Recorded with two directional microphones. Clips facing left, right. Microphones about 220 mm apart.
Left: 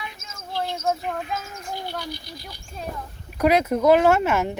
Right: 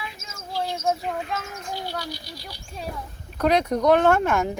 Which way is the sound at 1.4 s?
55° right (ahead or behind).